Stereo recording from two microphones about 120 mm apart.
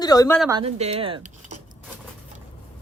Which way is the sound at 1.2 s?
90° right.